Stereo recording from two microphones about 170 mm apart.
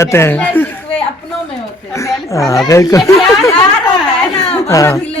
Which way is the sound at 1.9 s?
20° left (ahead or behind).